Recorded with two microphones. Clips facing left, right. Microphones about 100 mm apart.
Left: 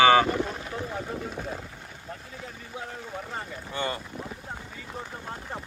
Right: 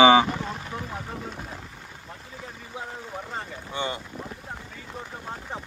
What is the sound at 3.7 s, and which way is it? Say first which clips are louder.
Speech: even; 20° right (ahead or behind).